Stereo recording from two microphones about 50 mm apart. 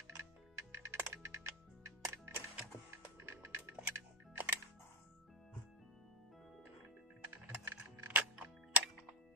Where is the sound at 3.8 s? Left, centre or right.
Right.